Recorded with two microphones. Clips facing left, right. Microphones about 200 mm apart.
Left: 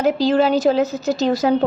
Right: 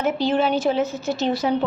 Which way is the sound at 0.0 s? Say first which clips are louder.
Left 4 dB; 35° left (ahead or behind).